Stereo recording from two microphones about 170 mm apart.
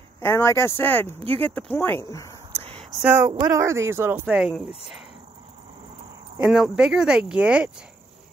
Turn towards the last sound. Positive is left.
turn(degrees=-5)  # may be behind; listen again after turning